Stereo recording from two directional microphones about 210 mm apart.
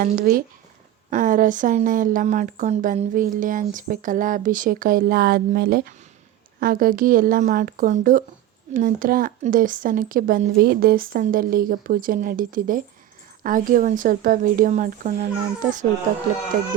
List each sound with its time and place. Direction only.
0.0 s a woman's voice: 45° right (ahead or behind)